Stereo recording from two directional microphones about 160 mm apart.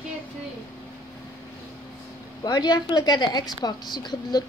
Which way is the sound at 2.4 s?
25° left (ahead or behind).